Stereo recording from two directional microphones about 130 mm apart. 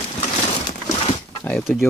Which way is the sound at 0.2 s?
70° left (ahead or behind).